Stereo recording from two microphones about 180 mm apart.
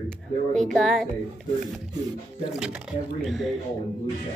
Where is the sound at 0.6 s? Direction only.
5° left (ahead or behind).